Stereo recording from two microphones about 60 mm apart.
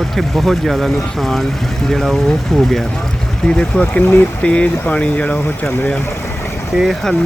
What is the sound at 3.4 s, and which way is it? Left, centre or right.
Speech, centre.